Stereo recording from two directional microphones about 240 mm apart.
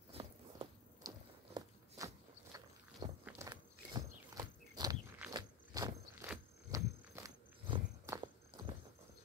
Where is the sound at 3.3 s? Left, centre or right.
Centre.